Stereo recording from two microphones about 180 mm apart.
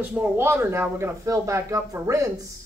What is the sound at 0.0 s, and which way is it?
A woman's voice, 10° right (ahead or behind).